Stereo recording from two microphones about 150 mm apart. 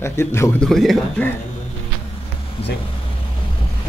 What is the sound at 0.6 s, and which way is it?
Speech, centre (ahead or behind).